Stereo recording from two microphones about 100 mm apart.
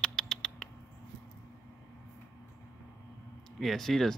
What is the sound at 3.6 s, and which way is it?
Speech, centre (ahead or behind).